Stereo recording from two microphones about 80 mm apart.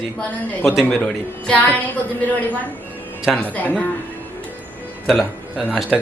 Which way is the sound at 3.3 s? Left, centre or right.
Centre.